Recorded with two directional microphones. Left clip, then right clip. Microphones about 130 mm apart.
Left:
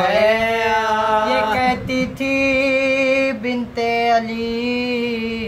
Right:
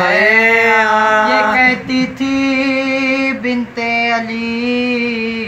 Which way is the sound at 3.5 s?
Centre (ahead or behind).